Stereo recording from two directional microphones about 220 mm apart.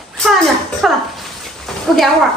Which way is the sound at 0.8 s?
Centre (ahead or behind).